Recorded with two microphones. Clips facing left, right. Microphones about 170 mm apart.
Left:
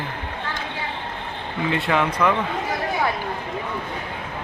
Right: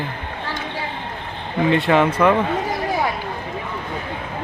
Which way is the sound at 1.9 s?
30° right (ahead or behind).